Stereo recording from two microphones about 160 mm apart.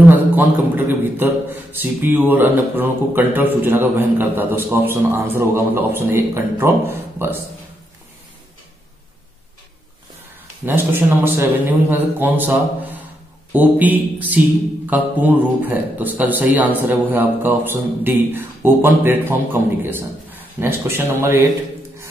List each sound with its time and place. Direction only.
0.7 s a man's voice: 10° right (ahead or behind)
10.6 s a man's voice: 15° right (ahead or behind)